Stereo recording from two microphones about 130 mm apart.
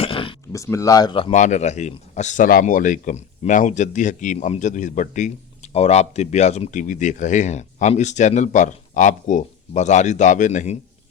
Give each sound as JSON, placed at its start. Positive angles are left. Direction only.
{"t": 0.0, "sound": "a sound", "side_deg": 45}
{"t": 0.5, "sound": "speech", "side_deg": 25}
{"t": 1.3, "sound": "speech", "side_deg": 65}